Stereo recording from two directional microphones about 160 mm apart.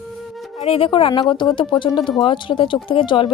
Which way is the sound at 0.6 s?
35° left (ahead or behind).